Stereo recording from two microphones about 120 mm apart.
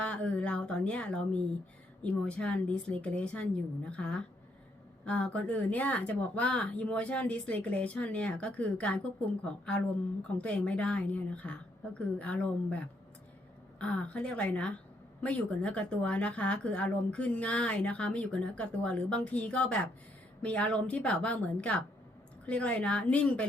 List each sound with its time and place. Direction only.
0.0 s speech: 10° left (ahead or behind)